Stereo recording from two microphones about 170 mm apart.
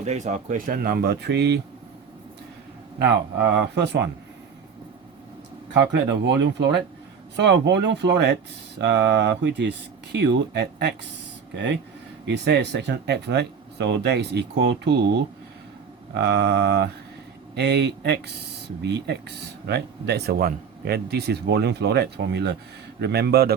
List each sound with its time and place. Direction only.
0.0 s speech: 45° right (ahead or behind); by 1.6 s 80° right
3.8 s speech: 80° right
5.9 s speech: 90° right; by 10.9 s 70° right (ahead or behind)
11.5 s speech: 90° right; by 23.6 s 70° right (ahead or behind)